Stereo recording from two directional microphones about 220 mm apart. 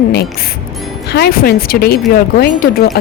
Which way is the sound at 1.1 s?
45° left (ahead or behind).